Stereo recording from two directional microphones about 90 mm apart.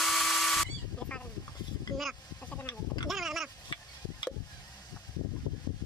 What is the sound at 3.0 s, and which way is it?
Goat, centre (ahead or behind).